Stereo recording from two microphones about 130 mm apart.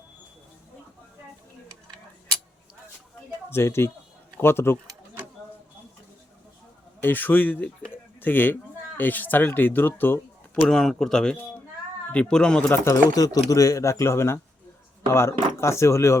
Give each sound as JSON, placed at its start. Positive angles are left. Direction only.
{"t": 3.5, "sound": "speech", "side_deg": 20}
{"t": 7.0, "sound": "a man's voice", "side_deg": 15}
{"t": 10.6, "sound": "a man's voice", "side_deg": 5}
{"t": 12.8, "sound": "speech", "side_deg": 25}